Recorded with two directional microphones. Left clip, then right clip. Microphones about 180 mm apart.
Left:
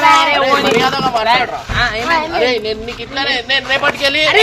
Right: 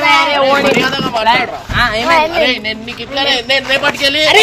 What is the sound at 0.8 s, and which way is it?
Speech, 50° right (ahead or behind).